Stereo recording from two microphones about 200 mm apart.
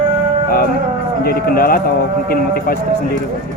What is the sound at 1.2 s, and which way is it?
Speech, 50° left (ahead or behind).